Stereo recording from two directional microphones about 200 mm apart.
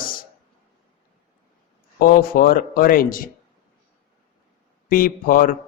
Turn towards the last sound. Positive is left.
turn(degrees=45)  # may be behind; listen again after turning